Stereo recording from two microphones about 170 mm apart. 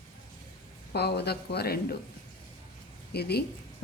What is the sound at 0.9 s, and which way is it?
Speech, 70° left (ahead or behind).